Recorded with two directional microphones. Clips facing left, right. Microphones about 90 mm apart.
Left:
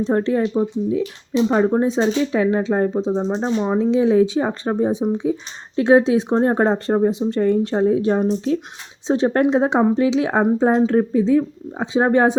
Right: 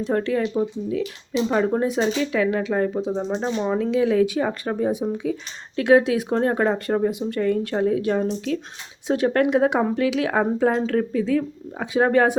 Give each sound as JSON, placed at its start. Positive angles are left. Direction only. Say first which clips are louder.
{"t": 0.0, "sound": "speech", "louder": "left 4 dB", "side_deg": 30}